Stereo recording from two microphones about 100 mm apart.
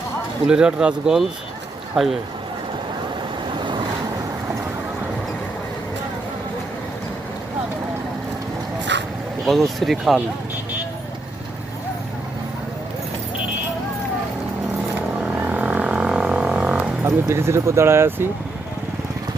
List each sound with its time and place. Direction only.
0.4 s speech: 10° right (ahead or behind)
9.5 s speech: centre (ahead or behind)
15.2 s vehicle: 15° right (ahead or behind)
17.1 s speech: 25° right (ahead or behind)